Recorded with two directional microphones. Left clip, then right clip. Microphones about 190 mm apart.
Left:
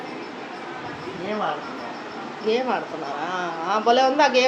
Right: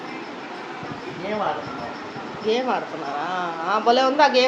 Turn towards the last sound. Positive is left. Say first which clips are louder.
# right 1 dB
turn(degrees=0)  # may be behind; listen again after turning